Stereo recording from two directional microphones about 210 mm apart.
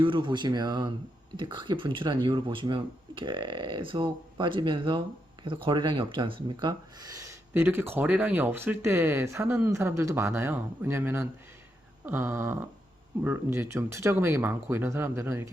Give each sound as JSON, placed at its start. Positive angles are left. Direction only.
{"t": 0.0, "sound": "speech", "side_deg": -25}